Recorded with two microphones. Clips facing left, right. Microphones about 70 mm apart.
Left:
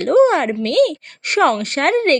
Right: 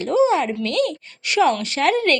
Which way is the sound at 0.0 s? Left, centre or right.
Left.